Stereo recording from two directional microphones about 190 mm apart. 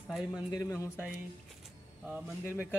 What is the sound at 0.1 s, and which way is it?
Speech, 5° right (ahead or behind).